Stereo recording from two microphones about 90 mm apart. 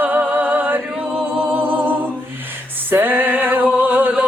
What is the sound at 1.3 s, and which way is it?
Music, 20° right (ahead or behind).